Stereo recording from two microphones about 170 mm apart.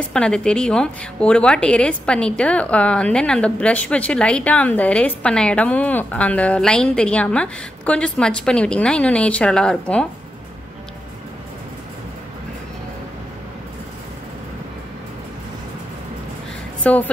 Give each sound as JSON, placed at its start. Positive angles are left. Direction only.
{"t": 0.1, "sound": "a woman's voice", "side_deg": 5}
{"t": 16.8, "sound": "a woman's voice", "side_deg": 10}